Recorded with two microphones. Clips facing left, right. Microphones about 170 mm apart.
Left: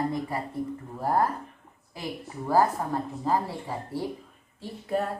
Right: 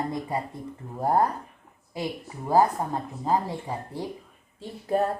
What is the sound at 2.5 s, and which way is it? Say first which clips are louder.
Speech: right 2 dB; 20° right (ahead or behind).